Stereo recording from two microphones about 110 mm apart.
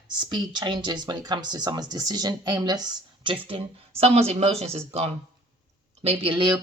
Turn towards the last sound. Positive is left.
turn(degrees=-45)  # may be behind; listen again after turning